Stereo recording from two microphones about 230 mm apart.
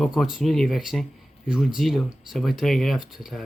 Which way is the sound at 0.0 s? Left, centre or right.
Centre.